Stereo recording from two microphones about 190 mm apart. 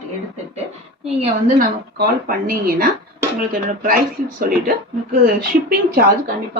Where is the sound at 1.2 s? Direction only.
45° right (ahead or behind).